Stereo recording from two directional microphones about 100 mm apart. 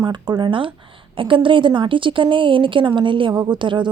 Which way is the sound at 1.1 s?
55° right (ahead or behind).